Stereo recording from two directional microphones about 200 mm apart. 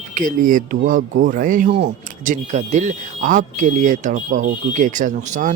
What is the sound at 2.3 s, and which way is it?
Speech, 35° right (ahead or behind).